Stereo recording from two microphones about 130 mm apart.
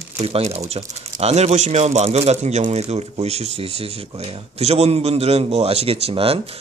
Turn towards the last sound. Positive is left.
turn(degrees=-45)  # may be behind; listen again after turning